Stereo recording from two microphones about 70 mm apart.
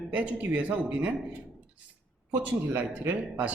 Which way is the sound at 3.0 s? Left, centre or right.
Right.